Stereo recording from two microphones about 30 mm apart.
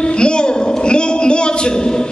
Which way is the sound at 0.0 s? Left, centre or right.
Left.